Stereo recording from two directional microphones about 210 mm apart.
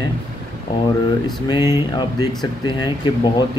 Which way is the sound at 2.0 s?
20° left (ahead or behind).